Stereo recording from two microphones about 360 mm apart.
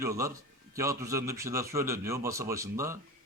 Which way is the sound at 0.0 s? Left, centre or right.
Centre.